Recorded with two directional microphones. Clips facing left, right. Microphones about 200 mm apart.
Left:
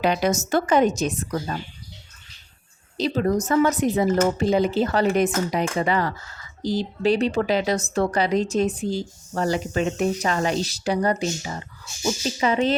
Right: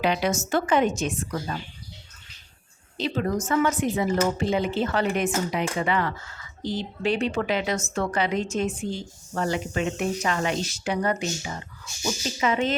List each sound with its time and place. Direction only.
0.0 s speech: 45° left (ahead or behind)
3.0 s speech: 35° left (ahead or behind)